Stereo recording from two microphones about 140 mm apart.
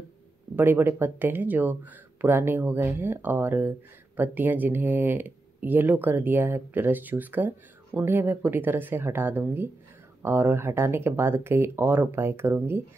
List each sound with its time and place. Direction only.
0.6 s speech: 15° right (ahead or behind)